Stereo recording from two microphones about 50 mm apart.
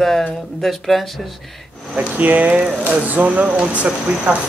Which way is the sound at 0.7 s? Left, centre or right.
Centre.